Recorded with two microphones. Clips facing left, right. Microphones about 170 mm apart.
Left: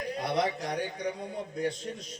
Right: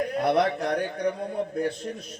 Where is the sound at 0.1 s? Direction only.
60° right (ahead or behind).